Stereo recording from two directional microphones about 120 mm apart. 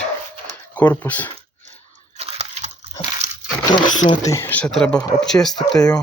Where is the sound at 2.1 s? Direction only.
65° right (ahead or behind).